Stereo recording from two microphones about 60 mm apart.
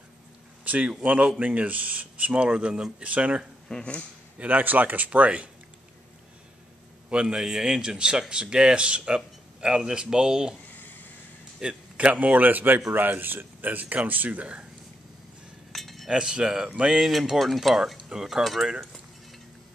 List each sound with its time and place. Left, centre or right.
0.7 s speech: right
3.6 s speech: centre
4.4 s speech: right
7.1 s speech: centre
11.6 s a man's voice: centre
12.2 s speech: right
15.7 s cutlery: centre
16.1 s speech: centre